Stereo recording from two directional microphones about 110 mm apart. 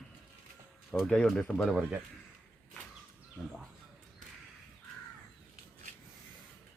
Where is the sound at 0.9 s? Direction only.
5° left (ahead or behind).